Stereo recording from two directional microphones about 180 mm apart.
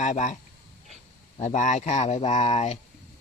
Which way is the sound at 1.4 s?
45° left (ahead or behind).